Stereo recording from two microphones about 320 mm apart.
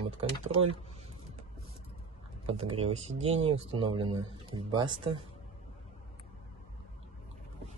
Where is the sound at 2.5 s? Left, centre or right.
Centre.